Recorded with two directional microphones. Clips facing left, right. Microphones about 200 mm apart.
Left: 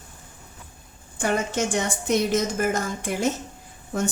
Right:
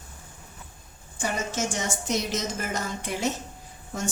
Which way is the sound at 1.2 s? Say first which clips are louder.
Left 5 dB; 60° left (ahead or behind).